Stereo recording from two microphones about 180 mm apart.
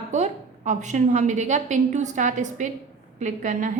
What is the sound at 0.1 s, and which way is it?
A woman's voice, 40° right (ahead or behind).